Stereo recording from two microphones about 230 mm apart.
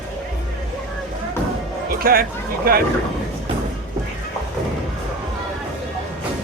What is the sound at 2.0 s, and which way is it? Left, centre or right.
Speech, right.